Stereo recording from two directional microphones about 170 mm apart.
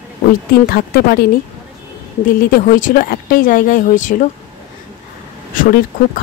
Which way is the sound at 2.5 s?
55° left (ahead or behind).